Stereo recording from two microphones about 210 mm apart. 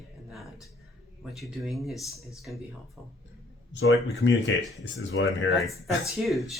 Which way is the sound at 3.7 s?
60° left (ahead or behind).